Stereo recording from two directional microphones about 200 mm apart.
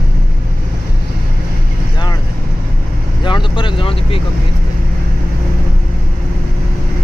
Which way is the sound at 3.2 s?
25° left (ahead or behind).